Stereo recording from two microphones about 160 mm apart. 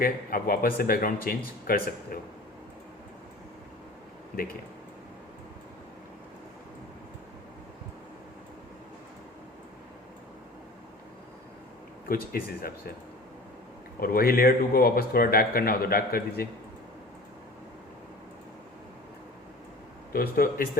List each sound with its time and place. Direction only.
0.0 s a man's voice: 65° left (ahead or behind)
12.0 s a man's voice: 70° left (ahead or behind)
14.0 s a man's voice: 70° left (ahead or behind)
20.1 s a man's voice: 70° left (ahead or behind)